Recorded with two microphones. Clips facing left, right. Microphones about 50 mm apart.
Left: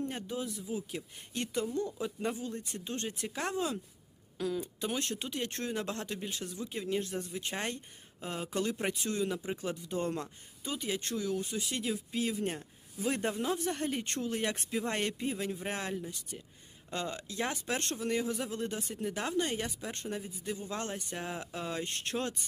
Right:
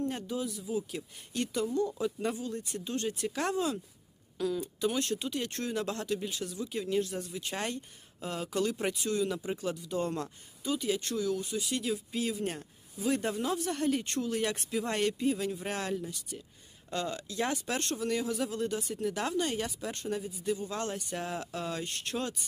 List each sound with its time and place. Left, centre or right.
0.1 s speech: left
4.4 s speech: left
4.6 s speech: left
11.9 s speech: centre
13.0 s speech: left
13.3 s speech: centre
21.2 s speech: centre
21.8 s speech: left